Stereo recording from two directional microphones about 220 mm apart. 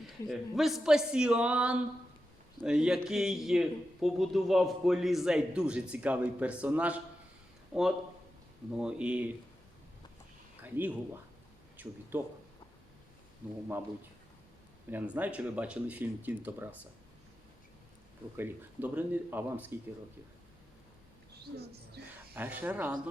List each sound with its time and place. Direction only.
0.3 s a man's voice: centre (ahead or behind)
10.6 s speech: 10° right (ahead or behind)
14.8 s speech: 5° right (ahead or behind)
18.3 s speech: 10° right (ahead or behind)
22.0 s speech: 50° right (ahead or behind)
22.4 s speech: 5° right (ahead or behind)